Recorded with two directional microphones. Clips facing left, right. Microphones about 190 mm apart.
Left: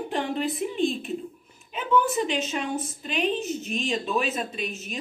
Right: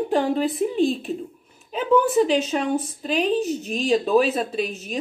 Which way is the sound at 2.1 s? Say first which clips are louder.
Right 8 dB; 35° right (ahead or behind).